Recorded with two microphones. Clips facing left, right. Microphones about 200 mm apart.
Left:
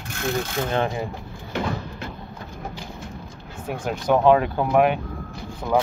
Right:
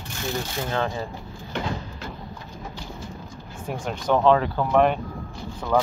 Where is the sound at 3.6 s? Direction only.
5° left (ahead or behind).